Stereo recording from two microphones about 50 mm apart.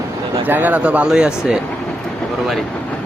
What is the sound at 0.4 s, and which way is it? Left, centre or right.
Speech, right.